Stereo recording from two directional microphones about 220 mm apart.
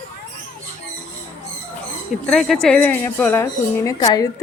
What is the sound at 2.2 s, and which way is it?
A woman's voice, centre (ahead or behind).